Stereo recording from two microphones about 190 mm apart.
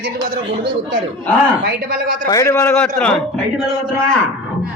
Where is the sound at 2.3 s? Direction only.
15° left (ahead or behind).